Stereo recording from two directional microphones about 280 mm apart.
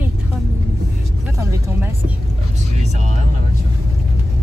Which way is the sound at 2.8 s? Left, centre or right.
Right.